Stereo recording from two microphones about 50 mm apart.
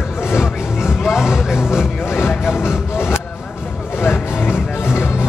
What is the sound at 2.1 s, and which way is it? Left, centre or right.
Music, left.